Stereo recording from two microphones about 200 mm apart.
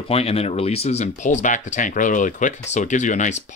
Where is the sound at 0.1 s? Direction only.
30° left (ahead or behind).